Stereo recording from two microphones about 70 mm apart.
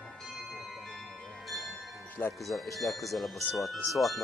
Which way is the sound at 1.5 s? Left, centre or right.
Centre.